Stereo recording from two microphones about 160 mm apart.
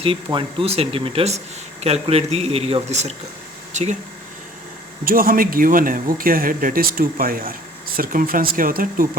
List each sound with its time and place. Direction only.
0.0 s speech: 30° right (ahead or behind); by 3.9 s 50° right (ahead or behind)
5.0 s speech: 65° right (ahead or behind)